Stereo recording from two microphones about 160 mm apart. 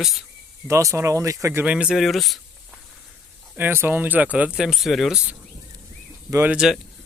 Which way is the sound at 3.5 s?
10° right (ahead or behind).